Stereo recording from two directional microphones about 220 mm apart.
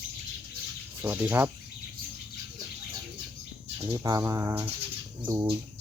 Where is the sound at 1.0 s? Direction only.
10° right (ahead or behind).